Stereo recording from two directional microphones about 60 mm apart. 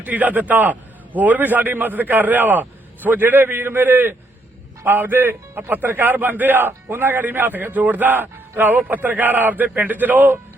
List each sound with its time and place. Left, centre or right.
0.0 s a man's voice: right